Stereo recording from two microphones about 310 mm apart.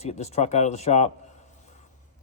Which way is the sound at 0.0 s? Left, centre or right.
Left.